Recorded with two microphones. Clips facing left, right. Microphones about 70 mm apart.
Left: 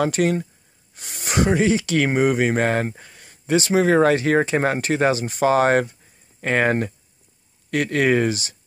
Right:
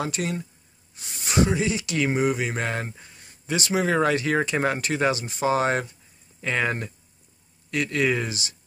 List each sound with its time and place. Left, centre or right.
0.0 s speech: left
3.4 s speech: left